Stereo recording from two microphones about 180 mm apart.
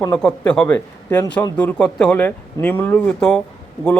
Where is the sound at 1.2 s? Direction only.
20° left (ahead or behind).